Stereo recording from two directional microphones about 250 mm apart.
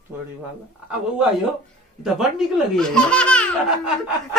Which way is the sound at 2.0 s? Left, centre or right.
Centre.